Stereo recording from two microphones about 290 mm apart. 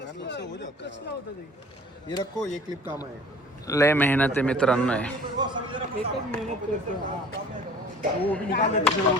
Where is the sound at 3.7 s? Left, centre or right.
Centre.